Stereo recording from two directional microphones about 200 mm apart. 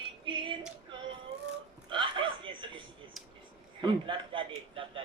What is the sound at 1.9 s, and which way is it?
Chuckle, 25° right (ahead or behind).